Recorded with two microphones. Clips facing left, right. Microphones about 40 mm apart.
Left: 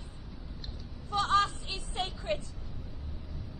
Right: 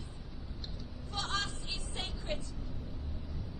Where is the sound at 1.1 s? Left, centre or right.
Left.